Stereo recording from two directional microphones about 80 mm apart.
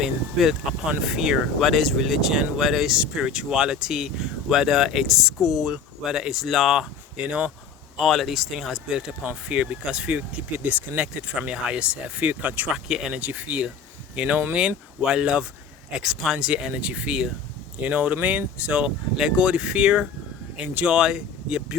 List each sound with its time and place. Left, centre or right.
0.0 s speech: centre
7.9 s speech: centre
12.7 s speech: centre